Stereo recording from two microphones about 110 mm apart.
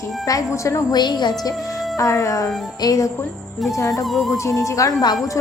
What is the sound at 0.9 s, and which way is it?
Speech, 40° left (ahead or behind).